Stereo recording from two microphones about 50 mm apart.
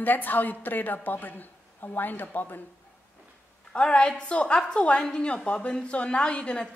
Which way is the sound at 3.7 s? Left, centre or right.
Centre.